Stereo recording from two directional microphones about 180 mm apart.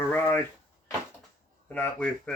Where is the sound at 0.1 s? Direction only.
10° left (ahead or behind).